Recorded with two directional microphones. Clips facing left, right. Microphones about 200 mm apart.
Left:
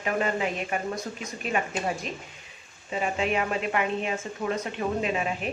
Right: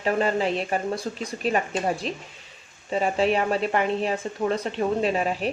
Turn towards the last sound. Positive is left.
turn(degrees=-35)  # may be behind; listen again after turning